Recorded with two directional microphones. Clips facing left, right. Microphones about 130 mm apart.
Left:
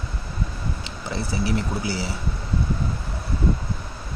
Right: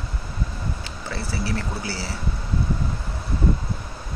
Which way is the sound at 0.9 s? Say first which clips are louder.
Left 2 dB; 20° left (ahead or behind).